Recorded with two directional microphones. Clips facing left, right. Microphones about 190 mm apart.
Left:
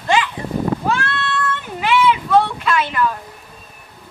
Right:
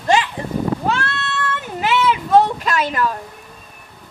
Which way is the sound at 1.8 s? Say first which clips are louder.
Left 2 dB; 40° right (ahead or behind).